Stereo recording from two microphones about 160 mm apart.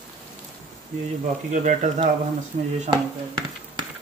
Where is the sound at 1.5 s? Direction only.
50° right (ahead or behind).